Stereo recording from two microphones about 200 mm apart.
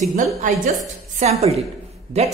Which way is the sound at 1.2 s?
30° right (ahead or behind).